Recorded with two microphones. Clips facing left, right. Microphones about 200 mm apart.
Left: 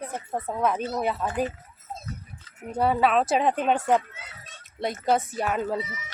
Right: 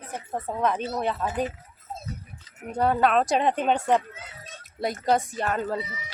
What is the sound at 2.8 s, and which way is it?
Speech, 5° left (ahead or behind).